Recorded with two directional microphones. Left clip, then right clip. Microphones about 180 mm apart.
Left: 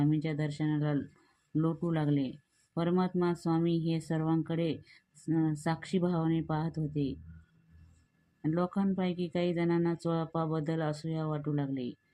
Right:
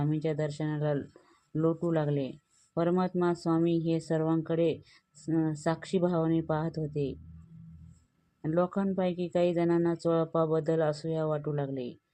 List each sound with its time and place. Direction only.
0.0 s speech: 25° right (ahead or behind)
8.4 s speech: 25° right (ahead or behind)